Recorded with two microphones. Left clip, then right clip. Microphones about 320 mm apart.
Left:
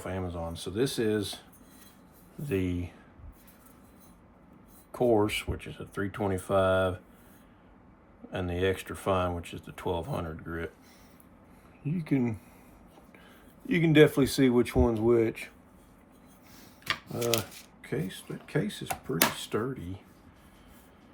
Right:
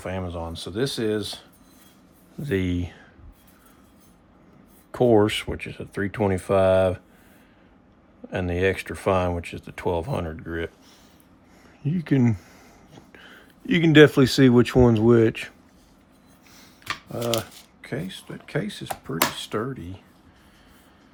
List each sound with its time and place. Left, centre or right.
0.0 s speech: right
2.4 s speech: right
5.1 s speech: right
8.3 s speech: right
11.9 s speech: right
17.3 s speech: centre
17.8 s speech: right